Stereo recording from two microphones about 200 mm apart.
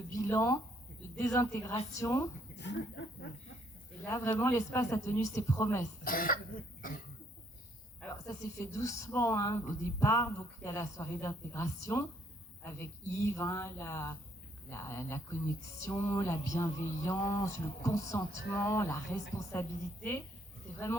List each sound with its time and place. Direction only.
0.1 s speech: 15° left (ahead or behind)
2.6 s speech: 60° left (ahead or behind)
4.0 s speech: 10° left (ahead or behind)
6.1 s speech: 45° left (ahead or behind)
8.1 s speech: 15° left (ahead or behind)